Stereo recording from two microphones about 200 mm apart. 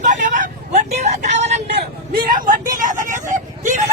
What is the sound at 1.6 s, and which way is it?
Vehicle, 50° right (ahead or behind).